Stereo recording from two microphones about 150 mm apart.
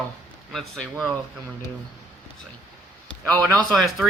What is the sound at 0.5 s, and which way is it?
Speech, centre (ahead or behind).